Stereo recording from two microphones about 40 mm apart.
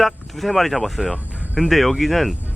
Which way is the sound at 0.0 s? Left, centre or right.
Centre.